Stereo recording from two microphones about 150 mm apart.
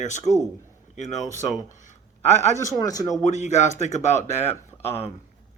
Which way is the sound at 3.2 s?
50° left (ahead or behind).